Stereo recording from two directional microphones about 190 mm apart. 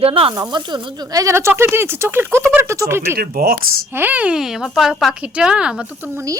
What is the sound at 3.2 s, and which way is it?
Speech, 50° right (ahead or behind).